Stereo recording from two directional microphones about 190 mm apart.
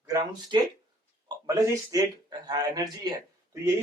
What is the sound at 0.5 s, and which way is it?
A man's voice, 25° right (ahead or behind).